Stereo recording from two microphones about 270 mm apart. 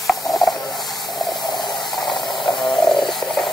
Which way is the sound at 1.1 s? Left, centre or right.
Centre.